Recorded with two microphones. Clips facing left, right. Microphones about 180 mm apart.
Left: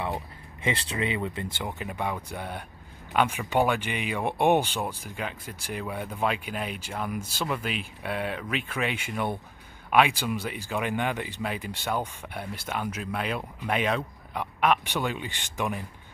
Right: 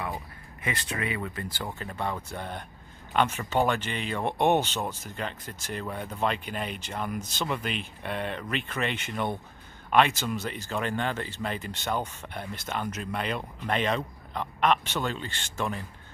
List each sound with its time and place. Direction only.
0.6 s speech: 25° left (ahead or behind)